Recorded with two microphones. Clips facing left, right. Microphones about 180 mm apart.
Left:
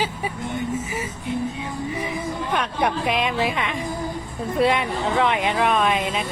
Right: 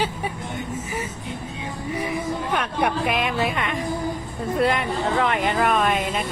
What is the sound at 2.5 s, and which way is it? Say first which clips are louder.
A woman's voice: left 1 dB; 5° right (ahead or behind).